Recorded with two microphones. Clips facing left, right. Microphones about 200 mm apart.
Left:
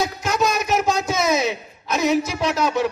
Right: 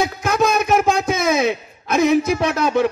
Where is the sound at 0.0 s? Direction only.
55° right (ahead or behind).